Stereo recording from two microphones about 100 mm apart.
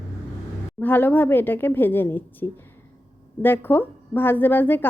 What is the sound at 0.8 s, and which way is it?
A woman's voice, 20° left (ahead or behind).